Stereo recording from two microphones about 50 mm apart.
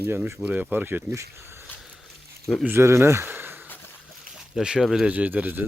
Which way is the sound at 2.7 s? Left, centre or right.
Right.